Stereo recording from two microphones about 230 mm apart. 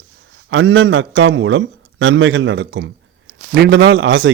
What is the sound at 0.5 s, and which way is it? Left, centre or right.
A man's voice, right.